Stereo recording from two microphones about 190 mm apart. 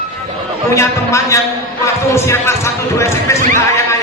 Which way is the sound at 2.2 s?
15° left (ahead or behind).